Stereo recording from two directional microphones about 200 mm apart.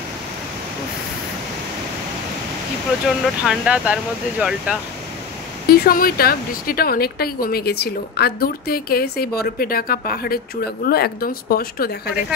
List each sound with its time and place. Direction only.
3.1 s speech: 5° right (ahead or behind)
5.7 s speech: 45° left (ahead or behind)